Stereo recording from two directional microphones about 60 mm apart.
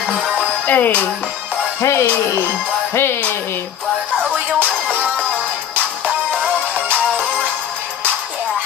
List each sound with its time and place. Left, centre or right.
0.0 s music: centre
0.7 s speech: left
1.8 s music: left
2.9 s music: left
4.2 s music: right
4.8 s music: centre